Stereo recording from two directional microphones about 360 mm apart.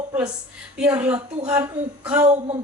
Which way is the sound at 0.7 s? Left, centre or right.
Centre.